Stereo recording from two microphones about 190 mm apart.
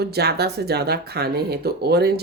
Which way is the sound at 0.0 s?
60° right (ahead or behind).